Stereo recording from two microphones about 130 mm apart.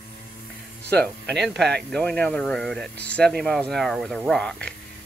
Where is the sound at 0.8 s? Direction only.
10° left (ahead or behind).